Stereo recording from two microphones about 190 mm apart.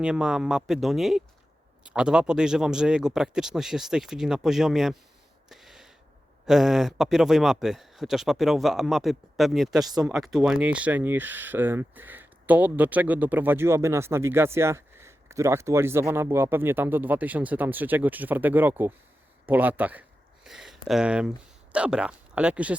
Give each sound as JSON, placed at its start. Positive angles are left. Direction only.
{"t": 0.0, "sound": "speech", "side_deg": -5}
{"t": 5.5, "sound": "a sound", "side_deg": 0}
{"t": 6.4, "sound": "speech", "side_deg": 0}
{"t": 9.8, "sound": "speech", "side_deg": -20}
{"t": 10.1, "sound": "speech", "side_deg": 0}